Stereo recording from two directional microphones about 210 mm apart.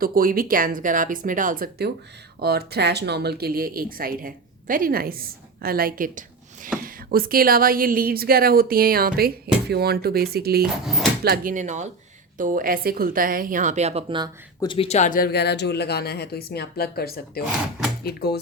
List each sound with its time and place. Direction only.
0.0 s speech: 45° right (ahead or behind); by 14.3 s 25° right (ahead or behind)
14.6 s speech: 25° left (ahead or behind); by 18.3 s 50° left (ahead or behind)